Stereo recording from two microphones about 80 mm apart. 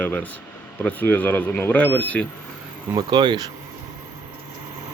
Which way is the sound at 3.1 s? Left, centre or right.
Right.